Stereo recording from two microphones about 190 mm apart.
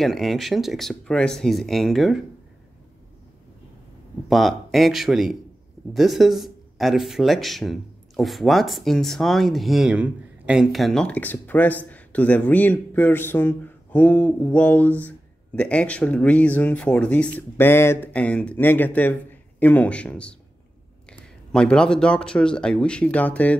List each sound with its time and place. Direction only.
0.0 s speech: centre (ahead or behind)
4.3 s speech: centre (ahead or behind)